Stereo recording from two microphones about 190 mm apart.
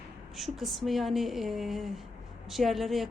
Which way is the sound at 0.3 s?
Centre (ahead or behind).